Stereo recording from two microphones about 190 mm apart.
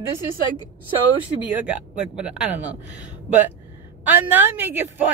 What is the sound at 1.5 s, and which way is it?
Speech, 5° right (ahead or behind).